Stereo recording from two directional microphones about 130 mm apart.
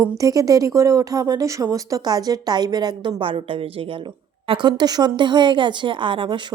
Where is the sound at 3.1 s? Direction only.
45° right (ahead or behind).